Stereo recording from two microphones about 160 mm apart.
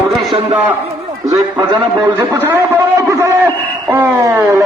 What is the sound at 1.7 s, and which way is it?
Speech, 25° right (ahead or behind).